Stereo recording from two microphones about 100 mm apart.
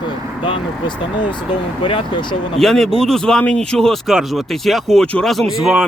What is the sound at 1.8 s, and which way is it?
Speech, 55° left (ahead or behind).